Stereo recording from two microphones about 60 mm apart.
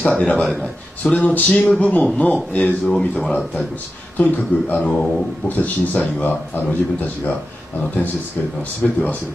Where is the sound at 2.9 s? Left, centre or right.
Centre.